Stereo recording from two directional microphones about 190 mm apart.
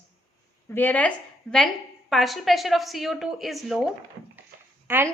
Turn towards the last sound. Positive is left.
turn(degrees=-10)  # may be behind; listen again after turning